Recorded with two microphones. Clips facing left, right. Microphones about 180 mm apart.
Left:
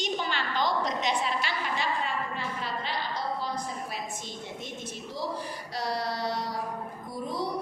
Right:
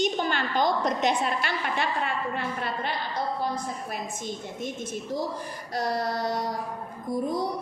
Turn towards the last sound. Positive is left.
turn(degrees=-50)  # may be behind; listen again after turning